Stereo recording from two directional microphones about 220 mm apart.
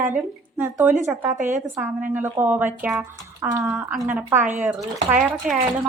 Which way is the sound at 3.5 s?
15° right (ahead or behind).